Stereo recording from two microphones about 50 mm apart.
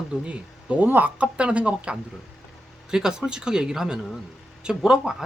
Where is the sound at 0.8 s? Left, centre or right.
Right.